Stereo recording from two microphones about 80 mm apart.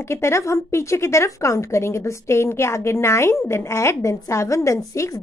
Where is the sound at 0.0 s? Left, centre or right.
Left.